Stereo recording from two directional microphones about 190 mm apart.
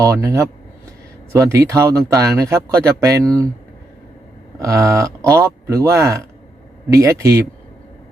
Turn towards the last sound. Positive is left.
turn(degrees=-15)  # may be behind; listen again after turning